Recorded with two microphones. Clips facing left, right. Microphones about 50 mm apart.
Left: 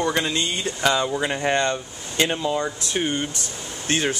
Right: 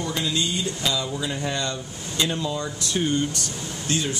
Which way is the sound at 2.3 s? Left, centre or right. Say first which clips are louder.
Left 4 dB; left.